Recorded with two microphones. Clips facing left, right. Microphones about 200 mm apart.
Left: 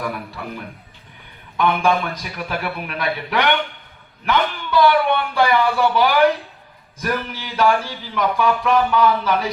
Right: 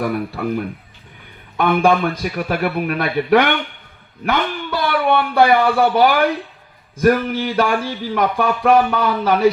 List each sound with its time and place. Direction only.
0.0 s speech: 55° right (ahead or behind)